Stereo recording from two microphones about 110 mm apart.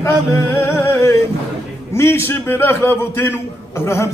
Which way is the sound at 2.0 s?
20° left (ahead or behind).